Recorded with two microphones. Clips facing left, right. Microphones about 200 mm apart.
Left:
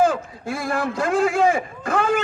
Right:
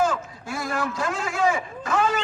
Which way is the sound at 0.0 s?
55° left (ahead or behind).